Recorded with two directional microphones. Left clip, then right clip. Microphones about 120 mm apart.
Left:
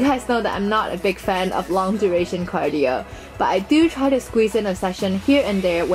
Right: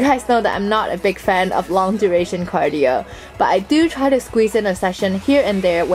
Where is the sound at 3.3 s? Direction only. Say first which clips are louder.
Right 3 dB; 15° right (ahead or behind).